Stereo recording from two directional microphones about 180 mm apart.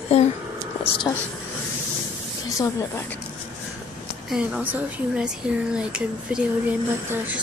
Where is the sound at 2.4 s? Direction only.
15° left (ahead or behind).